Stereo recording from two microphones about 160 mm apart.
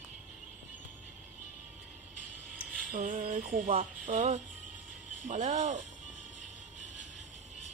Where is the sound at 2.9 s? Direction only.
55° right (ahead or behind).